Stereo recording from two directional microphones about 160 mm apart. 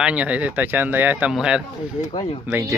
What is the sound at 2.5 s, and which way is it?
Speech, 20° right (ahead or behind).